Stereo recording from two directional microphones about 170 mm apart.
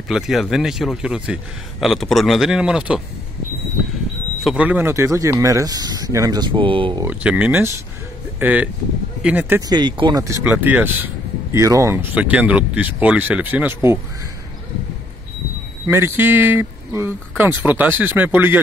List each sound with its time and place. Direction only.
0.1 s a man's voice: centre (ahead or behind)
4.4 s speech: 5° right (ahead or behind); by 7.0 s 30° right (ahead or behind)
7.0 s speech: 10° right (ahead or behind)
9.6 s speech: 25° right (ahead or behind)
15.9 s speech: 15° right (ahead or behind)